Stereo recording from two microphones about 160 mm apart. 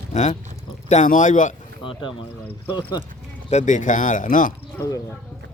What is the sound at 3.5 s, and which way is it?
A man's voice, 50° left (ahead or behind).